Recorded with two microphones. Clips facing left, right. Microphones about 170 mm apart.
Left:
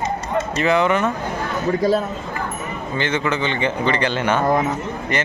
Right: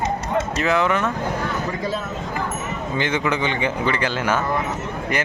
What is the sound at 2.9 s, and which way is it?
Speech, 15° right (ahead or behind).